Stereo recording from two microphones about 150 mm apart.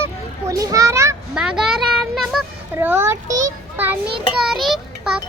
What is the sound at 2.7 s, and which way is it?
A child's voice, 15° right (ahead or behind).